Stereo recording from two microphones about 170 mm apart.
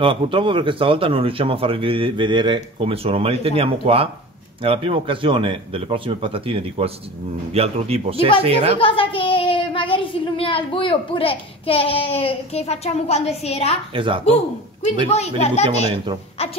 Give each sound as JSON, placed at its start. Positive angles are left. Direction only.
{"t": 0.0, "sound": "speech", "side_deg": -30}
{"t": 8.7, "sound": "speech", "side_deg": 30}
{"t": 13.9, "sound": "speech", "side_deg": -30}
{"t": 15.0, "sound": "speech", "side_deg": 40}